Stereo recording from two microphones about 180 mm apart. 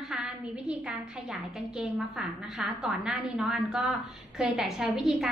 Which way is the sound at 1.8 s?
Centre (ahead or behind).